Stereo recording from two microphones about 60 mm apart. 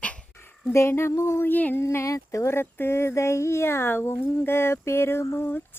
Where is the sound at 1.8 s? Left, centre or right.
Left.